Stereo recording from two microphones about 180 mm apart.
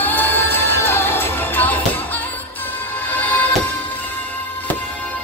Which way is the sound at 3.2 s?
10° left (ahead or behind).